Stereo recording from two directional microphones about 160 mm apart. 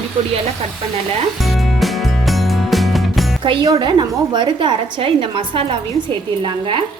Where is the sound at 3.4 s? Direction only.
25° right (ahead or behind).